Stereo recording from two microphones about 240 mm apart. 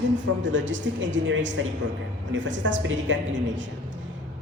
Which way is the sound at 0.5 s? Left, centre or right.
Right.